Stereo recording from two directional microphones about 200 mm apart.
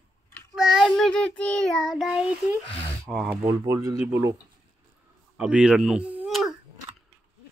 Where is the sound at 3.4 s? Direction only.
15° right (ahead or behind).